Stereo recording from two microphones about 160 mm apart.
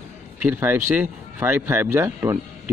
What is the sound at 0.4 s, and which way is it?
Speech, 10° right (ahead or behind).